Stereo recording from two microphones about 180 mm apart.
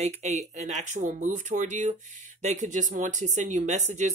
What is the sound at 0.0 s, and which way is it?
Speech, 40° right (ahead or behind).